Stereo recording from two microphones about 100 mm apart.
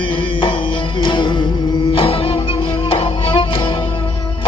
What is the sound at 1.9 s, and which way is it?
Music, 70° left (ahead or behind).